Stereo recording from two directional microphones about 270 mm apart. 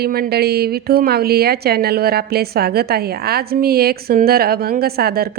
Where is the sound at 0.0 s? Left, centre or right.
Right.